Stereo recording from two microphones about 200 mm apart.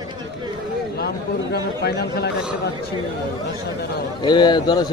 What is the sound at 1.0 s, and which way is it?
A man's voice, 55° left (ahead or behind).